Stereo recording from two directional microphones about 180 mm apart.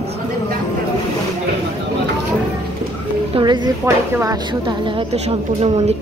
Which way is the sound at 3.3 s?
25° right (ahead or behind).